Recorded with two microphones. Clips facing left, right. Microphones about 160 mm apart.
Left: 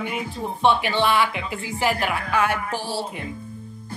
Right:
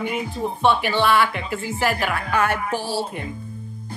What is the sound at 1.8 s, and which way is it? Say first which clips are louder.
Speech: left 1 dB; 15° left (ahead or behind).